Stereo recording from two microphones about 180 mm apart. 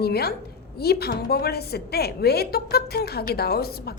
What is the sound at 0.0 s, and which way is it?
A woman's voice, 60° left (ahead or behind).